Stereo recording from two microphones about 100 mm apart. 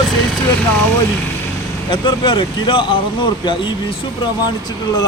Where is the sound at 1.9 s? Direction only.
50° left (ahead or behind).